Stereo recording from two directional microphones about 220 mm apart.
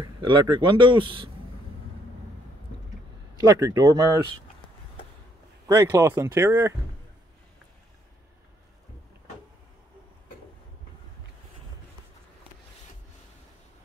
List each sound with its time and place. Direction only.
0.0 s speech: 20° right (ahead or behind)
3.3 s speech: 15° right (ahead or behind)
5.7 s speech: 15° right (ahead or behind)